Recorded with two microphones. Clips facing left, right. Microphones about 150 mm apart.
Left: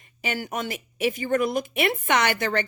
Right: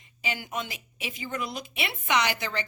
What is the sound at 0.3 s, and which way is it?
Speech, 50° left (ahead or behind).